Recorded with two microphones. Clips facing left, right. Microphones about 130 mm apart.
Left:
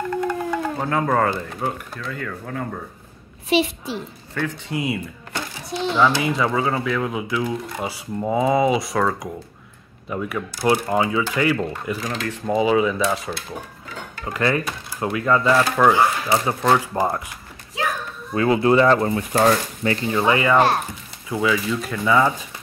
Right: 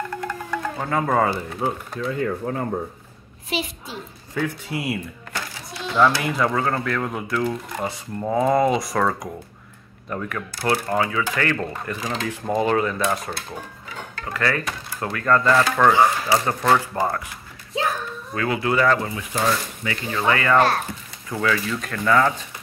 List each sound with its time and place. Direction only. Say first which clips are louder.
0.3 s a sound: left 4 dB; 5° left (ahead or behind)
1.6 s speech: right 4 dB; 15° right (ahead or behind)
3.4 s a child's voice: left 8 dB; 85° left
4.3 s speech: right 1 dB; 10° right (ahead or behind); by 11.5 s 15° left (ahead or behind)
11.5 s speech: left 3 dB; 5° left (ahead or behind)
14.1 s speech: left 3 dB; 20° left (ahead or behind); by 16.5 s centre (ahead or behind)
16.6 s speech: left 1 dB; 10° left (ahead or behind)
18.3 s speech: left 6 dB; 25° left (ahead or behind)
18.9 s speech: left 6 dB; 40° left (ahead or behind)
20.1 s speech: left 1 dB; 20° left (ahead or behind)